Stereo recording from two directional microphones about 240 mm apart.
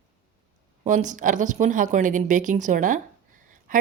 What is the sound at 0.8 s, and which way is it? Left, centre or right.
A woman's voice, right.